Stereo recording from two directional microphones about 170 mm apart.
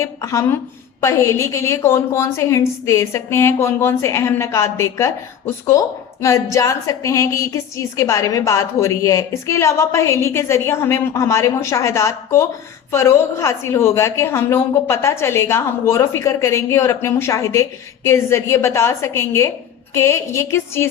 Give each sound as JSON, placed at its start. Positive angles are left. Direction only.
{"t": 0.0, "sound": "a woman's voice", "side_deg": 15}